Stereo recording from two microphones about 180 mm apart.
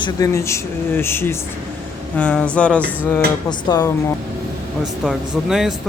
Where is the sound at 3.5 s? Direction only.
20° left (ahead or behind).